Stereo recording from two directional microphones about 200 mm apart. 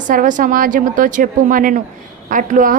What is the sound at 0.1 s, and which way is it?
A woman's voice, 40° right (ahead or behind).